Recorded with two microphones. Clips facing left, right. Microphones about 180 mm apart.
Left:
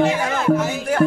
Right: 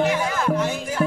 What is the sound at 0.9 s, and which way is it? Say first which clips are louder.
Music: left 8 dB; 65° left (ahead or behind).